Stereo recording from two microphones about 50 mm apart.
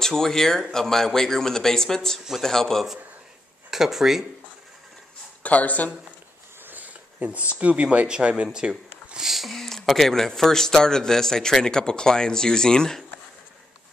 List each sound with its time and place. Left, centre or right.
0.0 s speech: centre
3.7 s speech: centre
5.4 s speech: left
6.6 s a sound: right
7.2 s speech: right
9.2 s a sound: centre
9.8 s speech: centre